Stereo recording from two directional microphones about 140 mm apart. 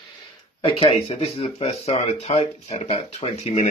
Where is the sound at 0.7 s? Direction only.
40° left (ahead or behind).